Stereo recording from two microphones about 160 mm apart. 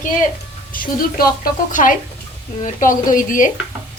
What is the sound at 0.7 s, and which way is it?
A woman's voice, 60° left (ahead or behind).